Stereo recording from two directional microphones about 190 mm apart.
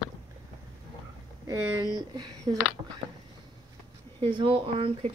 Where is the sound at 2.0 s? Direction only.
20° right (ahead or behind).